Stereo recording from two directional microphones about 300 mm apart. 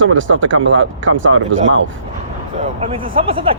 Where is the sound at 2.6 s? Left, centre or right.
Centre.